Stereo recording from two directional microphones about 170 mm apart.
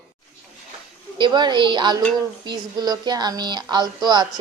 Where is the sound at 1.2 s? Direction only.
25° right (ahead or behind).